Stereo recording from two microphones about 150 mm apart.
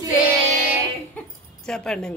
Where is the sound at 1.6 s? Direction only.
5° left (ahead or behind).